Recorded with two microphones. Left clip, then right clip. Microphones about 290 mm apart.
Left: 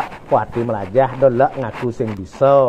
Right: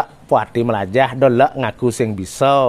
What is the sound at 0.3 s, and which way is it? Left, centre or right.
Speech, right.